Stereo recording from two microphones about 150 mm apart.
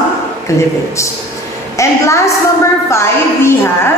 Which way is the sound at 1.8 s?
20° left (ahead or behind).